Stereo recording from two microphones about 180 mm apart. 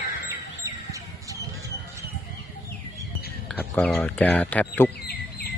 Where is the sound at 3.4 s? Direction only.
5° left (ahead or behind).